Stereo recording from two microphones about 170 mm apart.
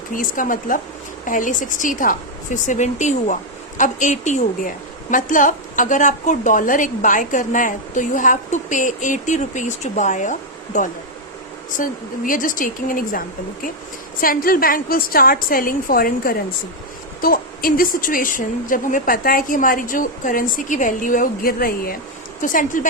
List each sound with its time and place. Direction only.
0.1 s a woman's voice: 50° left (ahead or behind)